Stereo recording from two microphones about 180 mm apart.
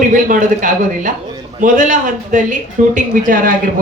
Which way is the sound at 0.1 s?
45° right (ahead or behind).